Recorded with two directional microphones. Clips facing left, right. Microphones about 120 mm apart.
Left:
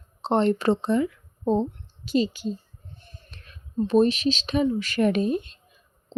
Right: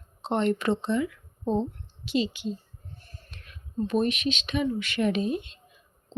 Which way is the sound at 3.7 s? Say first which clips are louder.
Left 6 dB; 30° left (ahead or behind).